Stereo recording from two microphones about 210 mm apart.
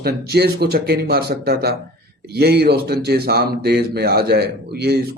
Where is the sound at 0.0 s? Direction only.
50° right (ahead or behind).